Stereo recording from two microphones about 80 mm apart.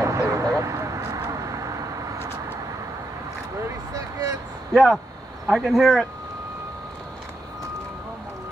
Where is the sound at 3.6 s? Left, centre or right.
Right.